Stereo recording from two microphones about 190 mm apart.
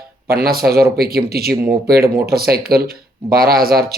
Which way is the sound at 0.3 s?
55° right (ahead or behind).